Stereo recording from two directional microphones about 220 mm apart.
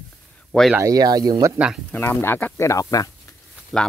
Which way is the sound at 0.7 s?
15° right (ahead or behind).